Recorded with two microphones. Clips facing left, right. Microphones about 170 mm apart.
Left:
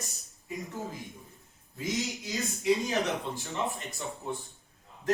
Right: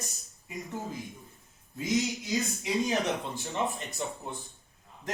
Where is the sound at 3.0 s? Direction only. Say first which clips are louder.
Right 1 dB; 20° right (ahead or behind).